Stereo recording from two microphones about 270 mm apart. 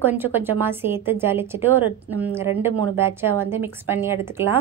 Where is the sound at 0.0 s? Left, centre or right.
Centre.